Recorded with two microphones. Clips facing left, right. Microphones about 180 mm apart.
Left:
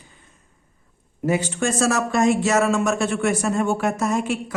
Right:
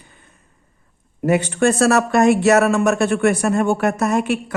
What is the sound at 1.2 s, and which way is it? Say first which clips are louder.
Speech: right 6 dB; 65° right (ahead or behind).